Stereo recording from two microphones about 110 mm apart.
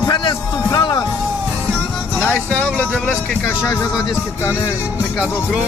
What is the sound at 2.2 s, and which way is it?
Speech, 10° left (ahead or behind).